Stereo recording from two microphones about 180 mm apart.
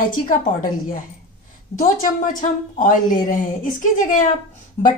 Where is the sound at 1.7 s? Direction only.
45° left (ahead or behind).